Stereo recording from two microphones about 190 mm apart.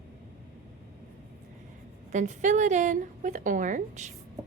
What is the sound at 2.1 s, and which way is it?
A woman's voice, 40° right (ahead or behind).